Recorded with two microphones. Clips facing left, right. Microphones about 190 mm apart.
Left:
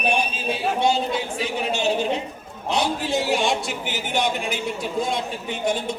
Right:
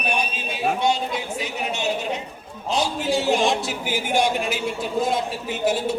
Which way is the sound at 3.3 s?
Centre (ahead or behind).